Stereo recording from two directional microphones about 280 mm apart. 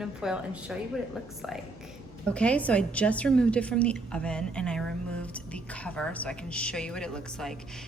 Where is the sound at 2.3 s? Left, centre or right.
Centre.